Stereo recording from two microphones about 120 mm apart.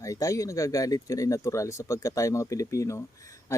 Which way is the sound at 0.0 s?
25° left (ahead or behind).